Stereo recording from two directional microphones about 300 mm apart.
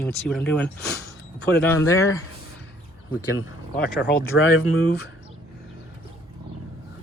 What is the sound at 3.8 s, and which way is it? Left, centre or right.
Speech, left.